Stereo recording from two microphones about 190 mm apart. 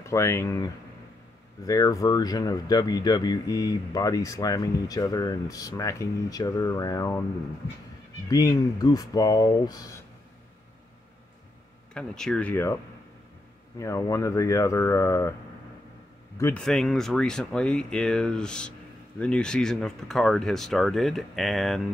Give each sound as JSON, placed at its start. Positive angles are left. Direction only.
{"t": 0.0, "sound": "speech", "side_deg": 15}
{"t": 1.7, "sound": "speech", "side_deg": 20}
{"t": 8.3, "sound": "speech", "side_deg": 20}
{"t": 11.9, "sound": "speech", "side_deg": 5}
{"t": 13.7, "sound": "speech", "side_deg": 15}
{"t": 16.3, "sound": "speech", "side_deg": 15}
{"t": 16.6, "sound": "speech", "side_deg": 0}